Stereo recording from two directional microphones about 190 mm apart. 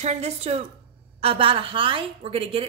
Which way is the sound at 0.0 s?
35° right (ahead or behind).